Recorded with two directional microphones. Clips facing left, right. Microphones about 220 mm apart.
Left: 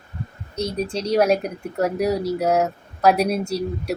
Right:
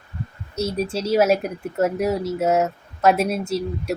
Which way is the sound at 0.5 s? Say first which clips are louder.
Right 1 dB; 5° right (ahead or behind).